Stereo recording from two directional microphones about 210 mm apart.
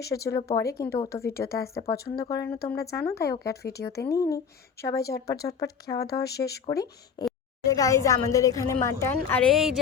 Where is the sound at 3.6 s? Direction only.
50° left (ahead or behind).